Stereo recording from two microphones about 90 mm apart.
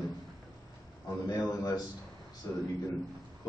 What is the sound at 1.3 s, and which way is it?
Speech, 45° left (ahead or behind).